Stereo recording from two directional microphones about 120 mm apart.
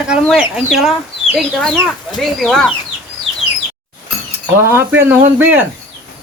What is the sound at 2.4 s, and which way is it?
Speech, centre (ahead or behind).